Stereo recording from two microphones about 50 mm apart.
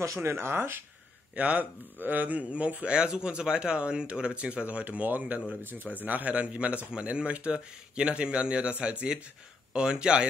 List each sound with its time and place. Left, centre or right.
0.0 s speech: right
1.3 s speech: right
3.0 s speech: centre